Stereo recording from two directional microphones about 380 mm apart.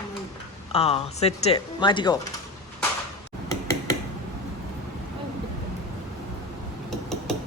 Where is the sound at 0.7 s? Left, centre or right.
Centre.